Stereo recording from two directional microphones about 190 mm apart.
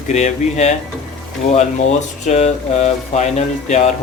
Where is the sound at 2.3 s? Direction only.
35° left (ahead or behind).